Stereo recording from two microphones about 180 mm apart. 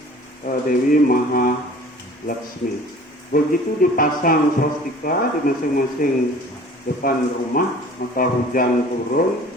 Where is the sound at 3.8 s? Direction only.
50° left (ahead or behind).